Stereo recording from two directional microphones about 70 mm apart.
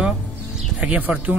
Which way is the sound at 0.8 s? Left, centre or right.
Centre.